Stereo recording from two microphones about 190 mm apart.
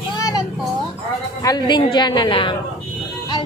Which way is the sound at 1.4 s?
20° left (ahead or behind).